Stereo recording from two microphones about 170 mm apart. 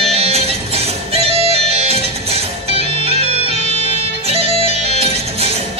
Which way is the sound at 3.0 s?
35° right (ahead or behind).